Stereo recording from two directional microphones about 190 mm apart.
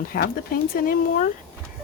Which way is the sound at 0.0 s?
50° left (ahead or behind).